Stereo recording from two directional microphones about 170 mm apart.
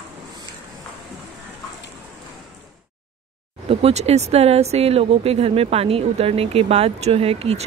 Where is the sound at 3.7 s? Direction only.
35° right (ahead or behind).